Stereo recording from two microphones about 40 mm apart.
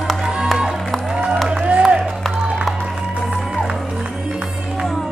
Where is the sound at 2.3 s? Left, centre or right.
Centre.